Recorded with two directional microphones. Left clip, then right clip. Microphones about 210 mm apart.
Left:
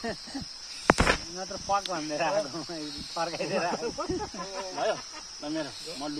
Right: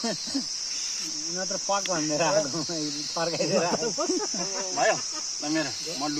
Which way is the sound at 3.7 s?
35° right (ahead or behind).